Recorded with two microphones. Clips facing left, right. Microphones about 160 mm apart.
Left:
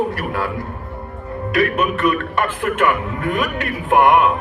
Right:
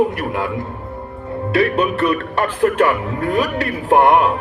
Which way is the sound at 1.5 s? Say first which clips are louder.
Right 2 dB; 30° right (ahead or behind).